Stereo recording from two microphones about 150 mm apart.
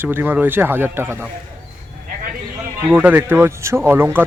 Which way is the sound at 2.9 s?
10° right (ahead or behind).